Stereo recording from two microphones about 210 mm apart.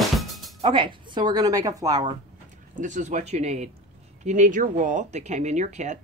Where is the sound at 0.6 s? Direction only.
25° right (ahead or behind).